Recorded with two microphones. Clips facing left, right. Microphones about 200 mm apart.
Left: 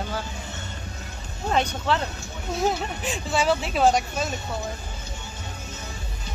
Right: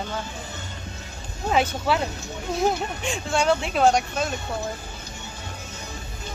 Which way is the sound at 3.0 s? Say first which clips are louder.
Right 1 dB; 5° left (ahead or behind).